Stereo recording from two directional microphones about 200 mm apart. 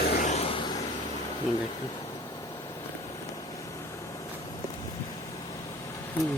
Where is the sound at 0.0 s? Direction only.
50° left (ahead or behind).